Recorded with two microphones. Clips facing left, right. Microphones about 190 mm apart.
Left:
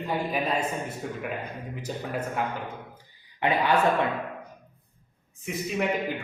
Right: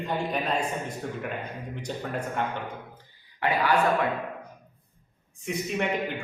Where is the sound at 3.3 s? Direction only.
20° left (ahead or behind).